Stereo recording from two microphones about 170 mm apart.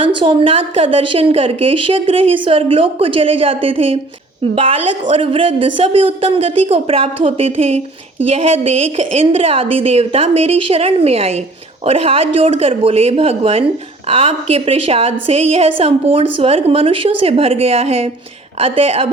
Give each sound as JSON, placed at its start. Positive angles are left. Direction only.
{"t": 0.0, "sound": "a woman's voice", "side_deg": -30}